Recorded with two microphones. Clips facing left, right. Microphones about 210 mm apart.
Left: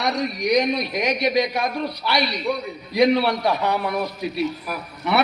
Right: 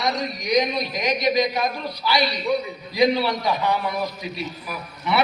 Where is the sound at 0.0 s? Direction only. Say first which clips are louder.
Left 3 dB; 65° left (ahead or behind).